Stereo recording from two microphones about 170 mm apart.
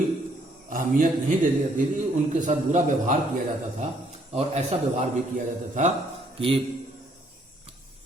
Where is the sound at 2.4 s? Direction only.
45° right (ahead or behind).